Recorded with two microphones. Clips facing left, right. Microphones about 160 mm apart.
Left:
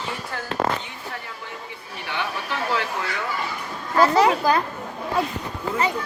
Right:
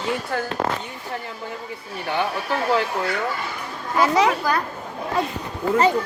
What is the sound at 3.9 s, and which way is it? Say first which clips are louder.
Speech: left 1 dB; 10° right (ahead or behind).